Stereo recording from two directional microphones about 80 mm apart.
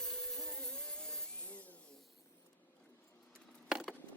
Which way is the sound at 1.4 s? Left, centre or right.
Centre.